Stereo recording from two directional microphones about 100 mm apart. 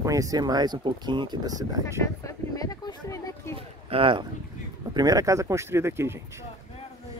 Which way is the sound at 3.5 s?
65° right (ahead or behind).